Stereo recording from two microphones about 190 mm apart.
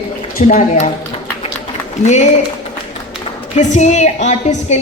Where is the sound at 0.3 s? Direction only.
45° left (ahead or behind).